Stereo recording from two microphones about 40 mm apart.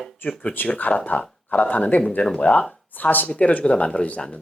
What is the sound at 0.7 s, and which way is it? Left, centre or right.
Speech, left.